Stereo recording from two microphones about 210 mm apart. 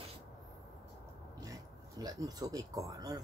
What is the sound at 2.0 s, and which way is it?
Speech, 15° right (ahead or behind).